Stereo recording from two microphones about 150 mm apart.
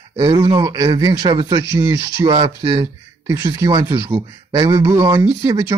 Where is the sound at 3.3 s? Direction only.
20° right (ahead or behind).